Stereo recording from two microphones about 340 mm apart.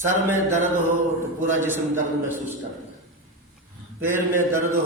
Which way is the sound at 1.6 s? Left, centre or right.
Centre.